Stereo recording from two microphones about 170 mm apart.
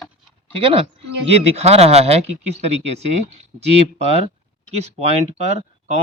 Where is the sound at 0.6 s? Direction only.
35° right (ahead or behind).